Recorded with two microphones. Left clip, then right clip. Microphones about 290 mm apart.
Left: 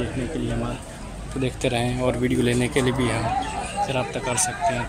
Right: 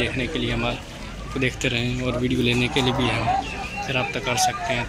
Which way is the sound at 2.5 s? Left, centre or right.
Left.